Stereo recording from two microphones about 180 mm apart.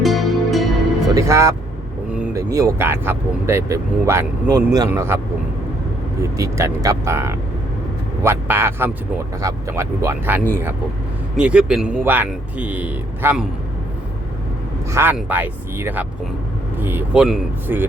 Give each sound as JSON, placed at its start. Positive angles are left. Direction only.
{"t": 0.0, "sound": "music", "side_deg": 0}
{"t": 1.1, "sound": "speech", "side_deg": -15}
{"t": 2.1, "sound": "vehicle", "side_deg": -10}
{"t": 2.5, "sound": "speech", "side_deg": -15}
{"t": 6.3, "sound": "speech", "side_deg": -15}
{"t": 14.9, "sound": "speech", "side_deg": -10}